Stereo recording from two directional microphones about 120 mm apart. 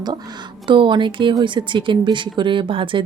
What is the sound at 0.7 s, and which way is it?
A woman's voice, 40° right (ahead or behind).